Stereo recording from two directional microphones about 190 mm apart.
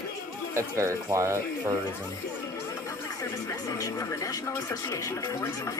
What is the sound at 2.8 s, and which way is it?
Speech, 15° left (ahead or behind).